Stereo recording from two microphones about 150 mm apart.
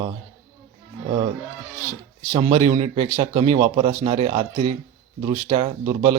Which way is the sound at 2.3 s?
35° right (ahead or behind).